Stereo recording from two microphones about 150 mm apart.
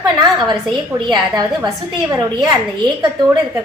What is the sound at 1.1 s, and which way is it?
Speech, 25° right (ahead or behind).